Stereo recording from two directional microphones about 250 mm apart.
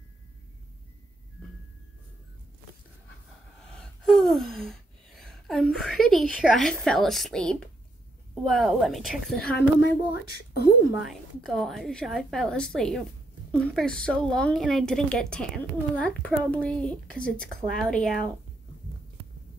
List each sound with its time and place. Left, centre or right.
3.7 s gasp: centre
8.5 s a woman's voice: centre
10.9 s a woman's voice: centre